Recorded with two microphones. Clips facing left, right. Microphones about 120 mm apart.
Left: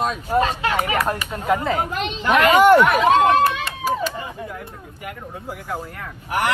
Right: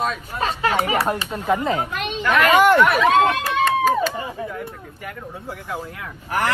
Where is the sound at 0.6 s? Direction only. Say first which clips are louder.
Right 1 dB; 35° right (ahead or behind).